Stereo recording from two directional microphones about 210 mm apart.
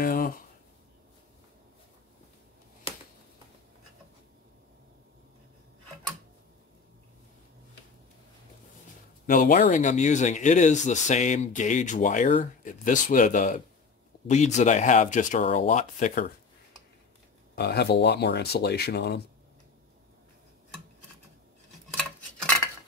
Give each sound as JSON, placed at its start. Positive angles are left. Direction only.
{"t": 0.0, "sound": "a sound", "side_deg": 45}
{"t": 9.2, "sound": "speech", "side_deg": 40}
{"t": 17.6, "sound": "speech", "side_deg": 50}